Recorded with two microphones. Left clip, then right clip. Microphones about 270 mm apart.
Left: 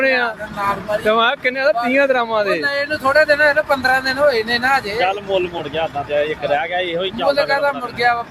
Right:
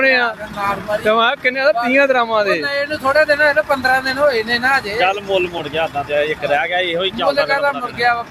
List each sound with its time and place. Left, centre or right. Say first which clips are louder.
0.0 s a man's voice: right 2 dB; centre
5.7 s speech: right 1 dB; centre
7.2 s speech: left 1 dB; right
7.9 s a man's voice: even; centre